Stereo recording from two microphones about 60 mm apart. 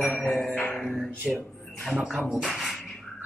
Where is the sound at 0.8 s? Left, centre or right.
Centre.